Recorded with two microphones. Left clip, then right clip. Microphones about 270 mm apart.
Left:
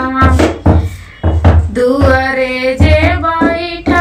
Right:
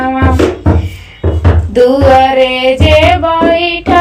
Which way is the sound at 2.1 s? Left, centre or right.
Right.